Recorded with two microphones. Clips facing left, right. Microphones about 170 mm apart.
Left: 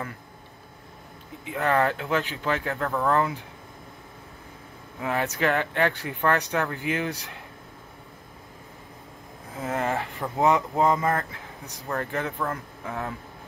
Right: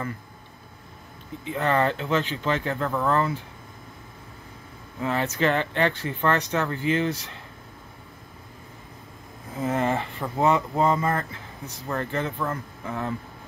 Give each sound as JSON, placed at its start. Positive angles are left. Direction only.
{"t": 1.4, "sound": "speech", "side_deg": 5}
{"t": 3.2, "sound": "speech", "side_deg": 15}
{"t": 5.0, "sound": "speech", "side_deg": 10}
{"t": 9.6, "sound": "speech", "side_deg": 0}
{"t": 10.8, "sound": "speech", "side_deg": 10}